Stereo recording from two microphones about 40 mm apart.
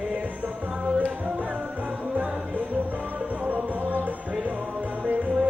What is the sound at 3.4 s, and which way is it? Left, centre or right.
Music, right.